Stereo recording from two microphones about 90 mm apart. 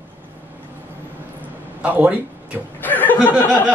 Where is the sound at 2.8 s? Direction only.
20° left (ahead or behind).